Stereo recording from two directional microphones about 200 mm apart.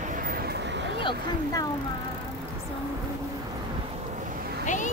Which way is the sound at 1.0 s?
20° left (ahead or behind).